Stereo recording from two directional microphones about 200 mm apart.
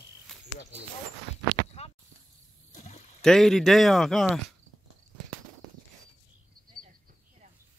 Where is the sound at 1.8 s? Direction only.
35° left (ahead or behind).